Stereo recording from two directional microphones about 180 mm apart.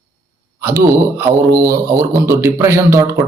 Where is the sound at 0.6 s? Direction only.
15° right (ahead or behind).